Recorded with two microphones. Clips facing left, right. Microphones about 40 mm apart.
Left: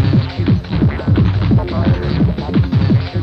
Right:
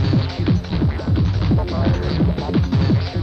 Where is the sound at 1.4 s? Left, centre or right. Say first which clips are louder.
Left 4 dB; centre.